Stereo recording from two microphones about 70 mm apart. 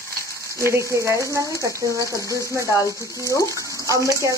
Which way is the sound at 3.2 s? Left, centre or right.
Left.